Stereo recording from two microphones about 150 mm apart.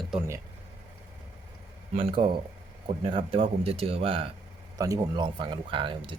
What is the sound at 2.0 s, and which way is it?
Speech, 35° right (ahead or behind).